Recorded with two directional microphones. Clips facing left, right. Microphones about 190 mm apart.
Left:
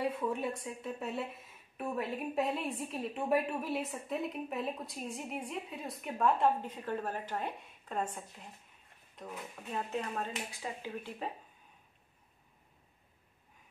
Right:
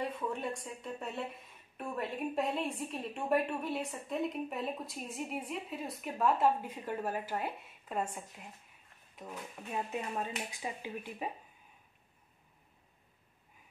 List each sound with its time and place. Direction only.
0.0 s a woman's voice: 5° left (ahead or behind)
9.7 s speech: 15° right (ahead or behind)